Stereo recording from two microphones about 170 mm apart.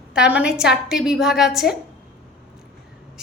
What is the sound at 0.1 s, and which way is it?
A woman's voice, 5° right (ahead or behind).